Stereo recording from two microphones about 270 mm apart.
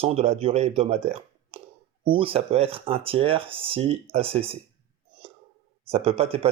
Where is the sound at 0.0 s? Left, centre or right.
Right.